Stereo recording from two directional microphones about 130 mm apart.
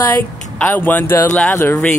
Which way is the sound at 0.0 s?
15° left (ahead or behind).